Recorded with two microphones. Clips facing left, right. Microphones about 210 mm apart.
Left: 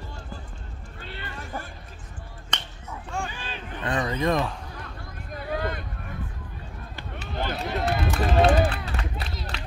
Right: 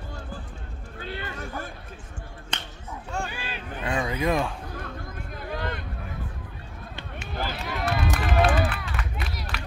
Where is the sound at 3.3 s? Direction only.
10° right (ahead or behind).